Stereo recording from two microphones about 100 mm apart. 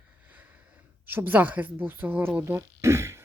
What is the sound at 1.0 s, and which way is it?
Speech, 20° right (ahead or behind).